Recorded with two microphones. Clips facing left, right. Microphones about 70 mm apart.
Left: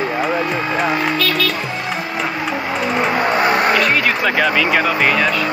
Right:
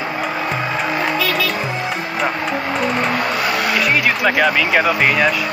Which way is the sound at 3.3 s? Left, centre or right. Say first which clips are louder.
Left 4 dB; left.